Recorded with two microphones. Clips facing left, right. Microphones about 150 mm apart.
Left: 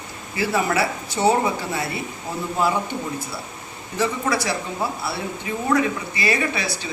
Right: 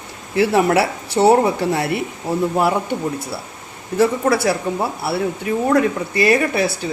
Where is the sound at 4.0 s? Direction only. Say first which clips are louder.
Right 7 dB; 55° right (ahead or behind).